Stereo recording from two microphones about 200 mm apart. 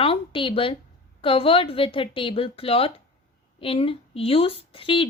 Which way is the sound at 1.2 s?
25° left (ahead or behind).